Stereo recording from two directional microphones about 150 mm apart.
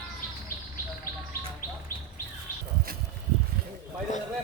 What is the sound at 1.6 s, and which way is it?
Bird, 75° left (ahead or behind).